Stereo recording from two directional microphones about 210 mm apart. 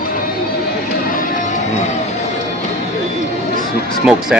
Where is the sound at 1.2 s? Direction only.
40° left (ahead or behind).